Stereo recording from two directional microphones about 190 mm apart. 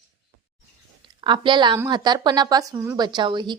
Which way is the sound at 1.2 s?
25° right (ahead or behind).